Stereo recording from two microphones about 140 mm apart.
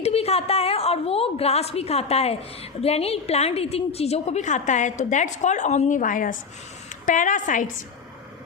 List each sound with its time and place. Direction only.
0.0 s a woman's voice: 45° left (ahead or behind); by 7.7 s 65° left (ahead or behind)